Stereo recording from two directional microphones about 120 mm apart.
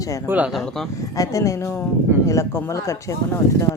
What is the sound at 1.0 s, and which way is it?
Speech, 25° left (ahead or behind).